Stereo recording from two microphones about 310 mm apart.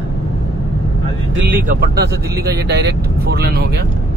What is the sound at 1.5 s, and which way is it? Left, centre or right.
Speech, right.